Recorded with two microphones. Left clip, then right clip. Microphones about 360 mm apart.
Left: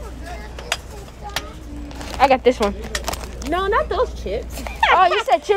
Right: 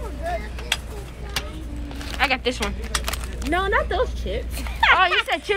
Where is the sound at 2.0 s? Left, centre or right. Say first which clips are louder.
Left 7 dB; centre.